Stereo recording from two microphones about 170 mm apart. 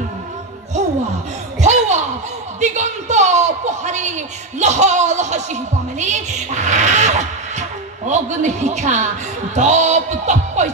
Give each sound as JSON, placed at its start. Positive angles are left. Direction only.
{"t": 1.6, "sound": "chuckle", "side_deg": -45}
{"t": 2.6, "sound": "a sound", "side_deg": -45}
{"t": 4.6, "sound": "speech", "side_deg": -45}